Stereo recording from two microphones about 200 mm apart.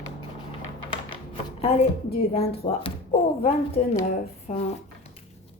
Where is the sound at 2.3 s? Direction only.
30° left (ahead or behind).